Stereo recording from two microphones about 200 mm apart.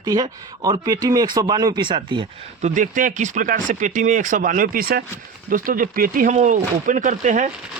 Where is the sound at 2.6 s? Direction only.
40° right (ahead or behind).